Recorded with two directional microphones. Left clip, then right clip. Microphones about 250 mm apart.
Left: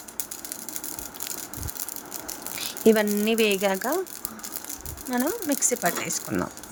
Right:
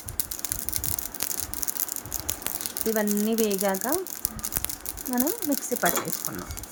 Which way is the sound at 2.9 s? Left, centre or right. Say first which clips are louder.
Left 5 dB; left.